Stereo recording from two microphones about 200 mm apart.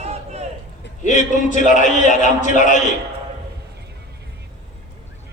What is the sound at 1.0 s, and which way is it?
A man's voice, 40° left (ahead or behind).